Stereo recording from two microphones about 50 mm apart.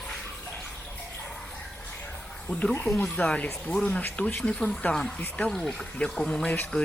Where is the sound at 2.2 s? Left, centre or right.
Left.